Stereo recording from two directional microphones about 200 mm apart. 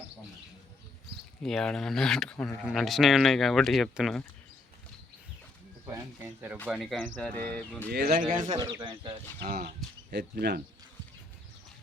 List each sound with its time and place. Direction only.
1.4 s speech: 5° left (ahead or behind)
5.8 s speech: 10° right (ahead or behind)
6.7 s speech: centre (ahead or behind)
7.9 s speech: 50° right (ahead or behind)
8.5 s speech: 25° right (ahead or behind)
9.4 s speech: 45° right (ahead or behind)